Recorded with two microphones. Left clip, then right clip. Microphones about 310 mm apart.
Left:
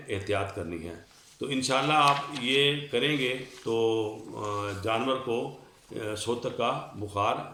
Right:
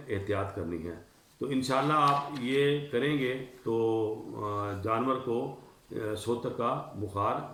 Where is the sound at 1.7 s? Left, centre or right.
Centre.